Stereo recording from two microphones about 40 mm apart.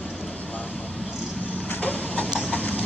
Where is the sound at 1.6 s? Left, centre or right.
Left.